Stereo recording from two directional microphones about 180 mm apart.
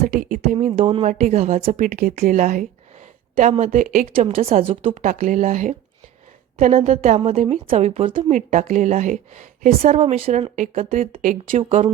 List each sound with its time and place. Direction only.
0.0 s speech: 45° right (ahead or behind)
4.1 s speech: 35° right (ahead or behind)
10.5 s speech: 45° right (ahead or behind)